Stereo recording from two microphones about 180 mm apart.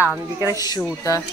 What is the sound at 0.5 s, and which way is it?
Speech, 20° left (ahead or behind).